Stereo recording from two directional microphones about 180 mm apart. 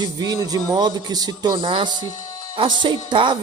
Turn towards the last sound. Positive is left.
turn(degrees=-25)  # may be behind; listen again after turning